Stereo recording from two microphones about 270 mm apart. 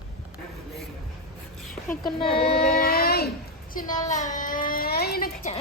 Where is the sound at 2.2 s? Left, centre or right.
Centre.